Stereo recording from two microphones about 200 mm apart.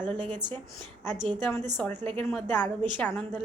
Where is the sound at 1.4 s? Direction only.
10° left (ahead or behind).